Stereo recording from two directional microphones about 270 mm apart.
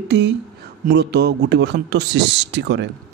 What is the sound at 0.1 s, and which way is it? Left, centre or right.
Speech, right.